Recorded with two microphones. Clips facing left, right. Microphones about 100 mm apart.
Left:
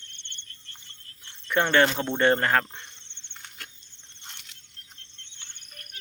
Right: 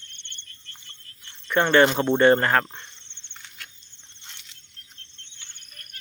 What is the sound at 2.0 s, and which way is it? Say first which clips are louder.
Speech: right 5 dB; 10° right (ahead or behind).